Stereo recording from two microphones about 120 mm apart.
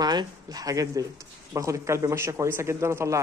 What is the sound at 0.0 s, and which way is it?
Speech, 35° right (ahead or behind).